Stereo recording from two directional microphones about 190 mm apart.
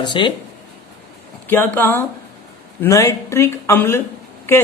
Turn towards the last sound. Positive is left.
turn(degrees=10)  # may be behind; listen again after turning